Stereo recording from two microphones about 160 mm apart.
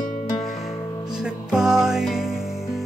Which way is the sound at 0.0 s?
55° left (ahead or behind).